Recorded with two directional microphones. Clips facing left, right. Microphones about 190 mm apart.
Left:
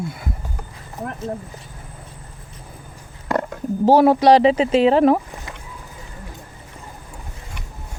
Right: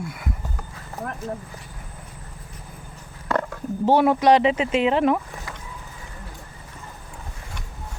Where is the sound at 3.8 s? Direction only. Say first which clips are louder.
Left 4 dB; 35° left (ahead or behind).